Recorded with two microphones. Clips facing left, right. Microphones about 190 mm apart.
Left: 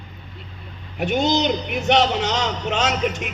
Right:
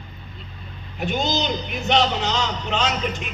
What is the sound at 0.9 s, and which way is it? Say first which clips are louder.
A man's voice: left 4 dB; 65° left (ahead or behind).